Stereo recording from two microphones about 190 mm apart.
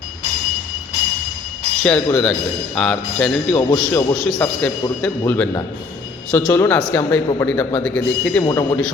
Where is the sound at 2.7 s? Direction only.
5° left (ahead or behind).